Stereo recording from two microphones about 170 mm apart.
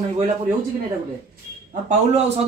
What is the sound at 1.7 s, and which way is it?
Speech, 45° right (ahead or behind).